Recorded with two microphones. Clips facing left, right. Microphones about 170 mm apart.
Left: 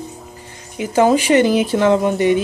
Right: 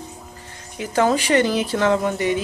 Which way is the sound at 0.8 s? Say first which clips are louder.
Left 5 dB; 15° left (ahead or behind).